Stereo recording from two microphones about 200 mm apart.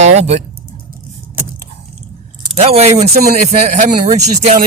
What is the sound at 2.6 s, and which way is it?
Speech, 30° right (ahead or behind).